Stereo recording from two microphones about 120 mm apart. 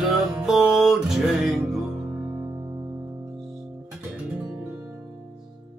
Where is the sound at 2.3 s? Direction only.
20° right (ahead or behind).